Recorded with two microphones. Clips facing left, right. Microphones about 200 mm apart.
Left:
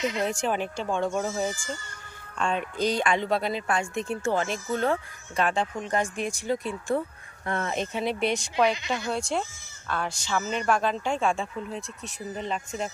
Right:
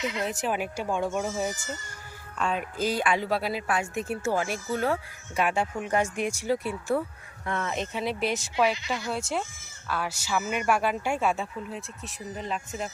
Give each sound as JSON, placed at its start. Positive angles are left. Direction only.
{"t": 0.0, "sound": "speech", "side_deg": 25}
{"t": 0.3, "sound": "a man's voice", "side_deg": -5}
{"t": 7.4, "sound": "speech", "side_deg": 40}
{"t": 7.8, "sound": "speech", "side_deg": 0}
{"t": 8.7, "sound": "speech", "side_deg": 20}
{"t": 9.0, "sound": "a man's voice", "side_deg": -5}